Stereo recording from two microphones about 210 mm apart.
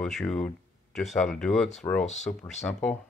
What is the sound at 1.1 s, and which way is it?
Speech, 5° left (ahead or behind).